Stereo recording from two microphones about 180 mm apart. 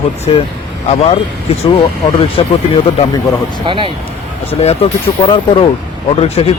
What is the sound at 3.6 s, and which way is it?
Speech, 30° right (ahead or behind).